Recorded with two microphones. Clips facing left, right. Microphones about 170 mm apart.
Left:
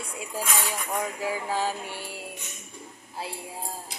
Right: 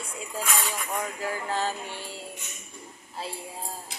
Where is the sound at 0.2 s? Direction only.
10° left (ahead or behind).